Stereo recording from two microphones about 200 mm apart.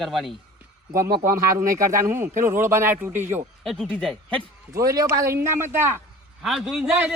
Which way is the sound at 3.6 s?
5° left (ahead or behind).